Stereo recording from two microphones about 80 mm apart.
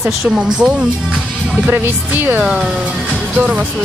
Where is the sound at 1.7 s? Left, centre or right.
Right.